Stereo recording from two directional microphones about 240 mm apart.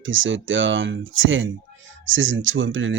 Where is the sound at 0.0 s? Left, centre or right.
Right.